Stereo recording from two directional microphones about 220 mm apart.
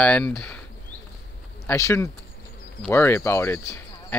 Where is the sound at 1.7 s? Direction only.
10° left (ahead or behind).